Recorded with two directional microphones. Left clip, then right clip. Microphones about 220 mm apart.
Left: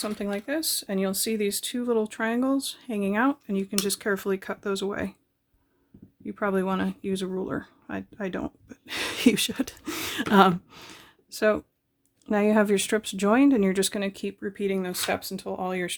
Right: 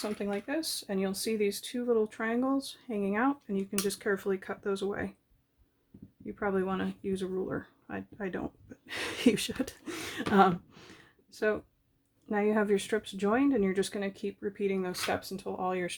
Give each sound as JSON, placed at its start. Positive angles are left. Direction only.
{"t": 0.0, "sound": "speech", "side_deg": 35}
{"t": 6.2, "sound": "speech", "side_deg": 40}